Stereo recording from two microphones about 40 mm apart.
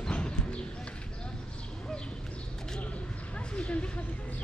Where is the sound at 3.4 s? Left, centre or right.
Left.